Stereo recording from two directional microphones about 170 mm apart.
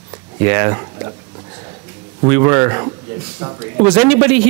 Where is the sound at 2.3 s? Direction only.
15° right (ahead or behind).